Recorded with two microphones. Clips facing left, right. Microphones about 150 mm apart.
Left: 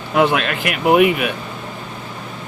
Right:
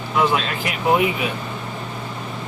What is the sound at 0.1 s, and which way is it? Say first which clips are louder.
Speech: left 4 dB; 65° left (ahead or behind).